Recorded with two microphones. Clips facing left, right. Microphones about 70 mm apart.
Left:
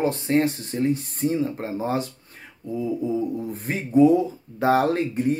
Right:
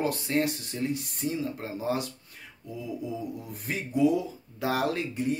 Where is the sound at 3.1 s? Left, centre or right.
Left.